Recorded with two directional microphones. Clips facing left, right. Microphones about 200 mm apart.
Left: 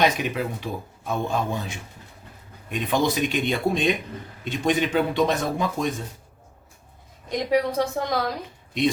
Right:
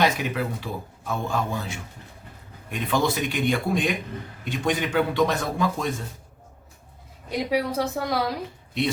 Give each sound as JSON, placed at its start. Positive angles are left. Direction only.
{"t": 0.0, "sound": "speech", "side_deg": 20}
{"t": 7.3, "sound": "a woman's voice", "side_deg": -5}